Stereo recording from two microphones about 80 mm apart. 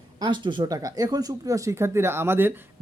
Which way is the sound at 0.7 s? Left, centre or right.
Right.